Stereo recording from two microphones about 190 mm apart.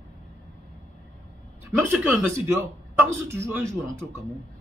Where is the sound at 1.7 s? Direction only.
10° right (ahead or behind).